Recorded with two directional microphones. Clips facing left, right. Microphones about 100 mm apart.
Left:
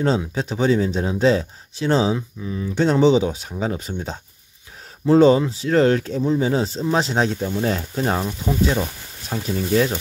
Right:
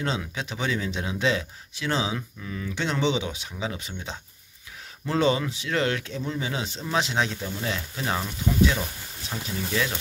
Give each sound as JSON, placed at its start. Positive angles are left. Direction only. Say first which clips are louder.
{"t": 0.0, "sound": "speech", "louder": "left 9 dB", "side_deg": 40}
{"t": 2.1, "sound": "speech", "louder": "left 6 dB", "side_deg": 25}
{"t": 2.7, "sound": "speech", "louder": "left 10 dB", "side_deg": 40}